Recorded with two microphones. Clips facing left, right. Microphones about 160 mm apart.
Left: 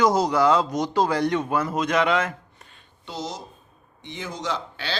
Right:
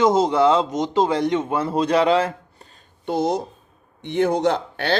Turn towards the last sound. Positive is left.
turn(degrees=-55)  # may be behind; listen again after turning